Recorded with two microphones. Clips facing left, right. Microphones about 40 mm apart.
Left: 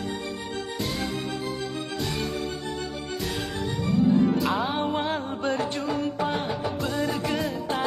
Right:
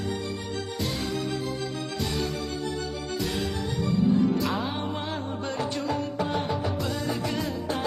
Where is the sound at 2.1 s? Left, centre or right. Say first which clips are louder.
Even; left.